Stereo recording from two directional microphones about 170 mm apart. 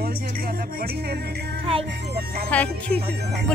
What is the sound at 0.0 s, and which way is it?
Speech, 65° right (ahead or behind).